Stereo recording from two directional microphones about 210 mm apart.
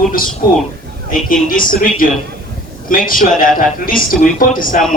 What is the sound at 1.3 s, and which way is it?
Speech, 40° left (ahead or behind).